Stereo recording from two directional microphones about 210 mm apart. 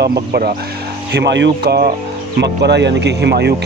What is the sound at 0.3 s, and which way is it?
Speech, 40° right (ahead or behind).